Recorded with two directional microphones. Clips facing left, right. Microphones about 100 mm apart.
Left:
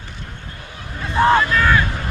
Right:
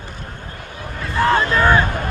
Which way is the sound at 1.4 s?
25° right (ahead or behind).